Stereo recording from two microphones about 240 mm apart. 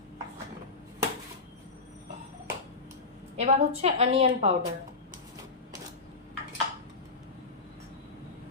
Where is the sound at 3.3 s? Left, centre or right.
Right.